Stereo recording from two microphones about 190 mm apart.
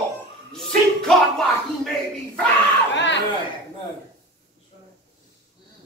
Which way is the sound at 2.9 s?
75° left (ahead or behind).